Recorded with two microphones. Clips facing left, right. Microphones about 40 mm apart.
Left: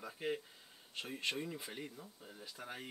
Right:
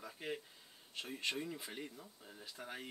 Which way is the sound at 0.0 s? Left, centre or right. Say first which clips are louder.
Left 4 dB; centre.